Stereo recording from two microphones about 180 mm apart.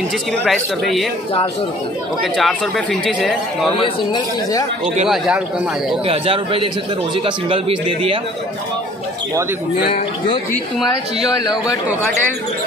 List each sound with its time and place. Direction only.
0.5 s speech: centre (ahead or behind)
2.3 s speech: centre (ahead or behind)
3.8 s a man's voice: 20° left (ahead or behind)
5.0 s speech: centre (ahead or behind)
6.0 s a man's voice: 30° right (ahead or behind)
11.2 s a man's voice: 20° left (ahead or behind)